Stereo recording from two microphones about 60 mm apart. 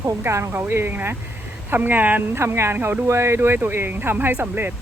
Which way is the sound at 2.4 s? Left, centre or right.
Right.